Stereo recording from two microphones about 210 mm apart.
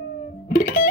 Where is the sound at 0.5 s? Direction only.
40° left (ahead or behind).